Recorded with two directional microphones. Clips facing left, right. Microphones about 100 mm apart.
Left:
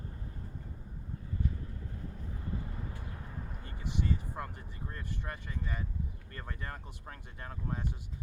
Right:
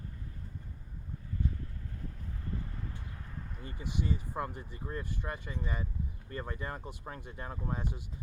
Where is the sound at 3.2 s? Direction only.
15° left (ahead or behind).